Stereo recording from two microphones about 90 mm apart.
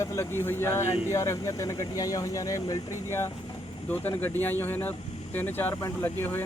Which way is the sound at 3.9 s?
20° left (ahead or behind).